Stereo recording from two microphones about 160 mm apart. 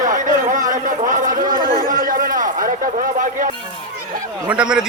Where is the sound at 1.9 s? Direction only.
60° right (ahead or behind).